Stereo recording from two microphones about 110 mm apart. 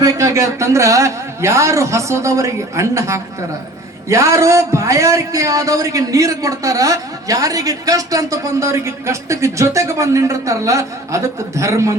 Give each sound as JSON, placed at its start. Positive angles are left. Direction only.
{"t": 0.0, "sound": "a man's voice", "side_deg": -30}